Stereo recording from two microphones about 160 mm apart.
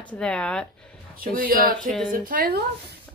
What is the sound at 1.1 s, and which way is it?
Speech, 60° right (ahead or behind).